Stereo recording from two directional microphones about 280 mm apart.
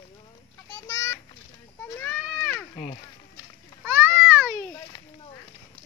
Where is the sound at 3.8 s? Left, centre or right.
Centre.